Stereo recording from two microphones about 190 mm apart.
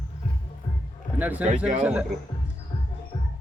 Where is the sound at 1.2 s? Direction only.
10° right (ahead or behind).